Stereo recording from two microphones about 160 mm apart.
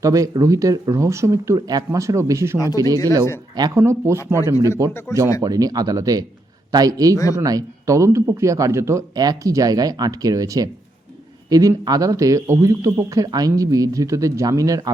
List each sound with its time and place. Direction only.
0.0 s a man's voice: 20° right (ahead or behind)